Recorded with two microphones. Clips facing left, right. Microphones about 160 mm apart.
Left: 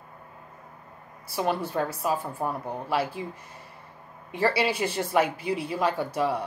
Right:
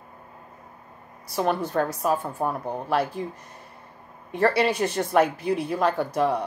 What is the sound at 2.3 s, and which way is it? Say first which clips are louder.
Speech: right 3 dB; 30° right (ahead or behind).